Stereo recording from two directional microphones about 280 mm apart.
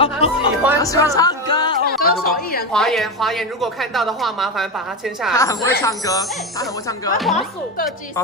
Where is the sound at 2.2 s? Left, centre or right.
Left.